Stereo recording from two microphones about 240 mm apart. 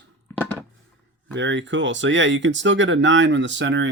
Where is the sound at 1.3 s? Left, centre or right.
Right.